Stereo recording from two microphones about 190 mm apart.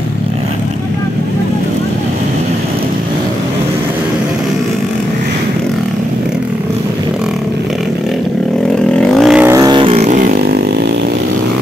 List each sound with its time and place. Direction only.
8.9 s vehicle: 5° left (ahead or behind)
9.5 s vehicle: 20° right (ahead or behind); by 10.6 s 50° right (ahead or behind)